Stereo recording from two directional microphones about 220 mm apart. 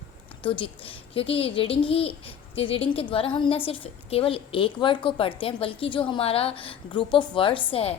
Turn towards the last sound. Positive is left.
turn(degrees=25)  # may be behind; listen again after turning